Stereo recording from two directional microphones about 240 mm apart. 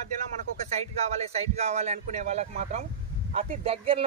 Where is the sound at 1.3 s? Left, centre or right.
Right.